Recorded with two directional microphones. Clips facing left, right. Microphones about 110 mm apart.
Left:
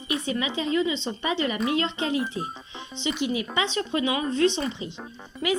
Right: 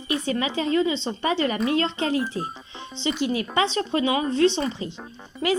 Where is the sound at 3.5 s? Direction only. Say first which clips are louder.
Right 5 dB; 35° right (ahead or behind).